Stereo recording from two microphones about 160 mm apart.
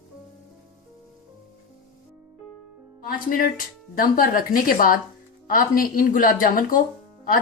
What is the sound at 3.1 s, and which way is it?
Music, 60° left (ahead or behind).